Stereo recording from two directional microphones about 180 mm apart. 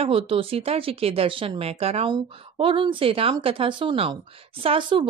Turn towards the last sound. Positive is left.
turn(degrees=-25)  # may be behind; listen again after turning